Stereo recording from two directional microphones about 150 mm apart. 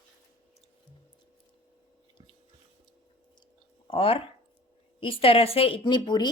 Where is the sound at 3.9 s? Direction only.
40° left (ahead or behind).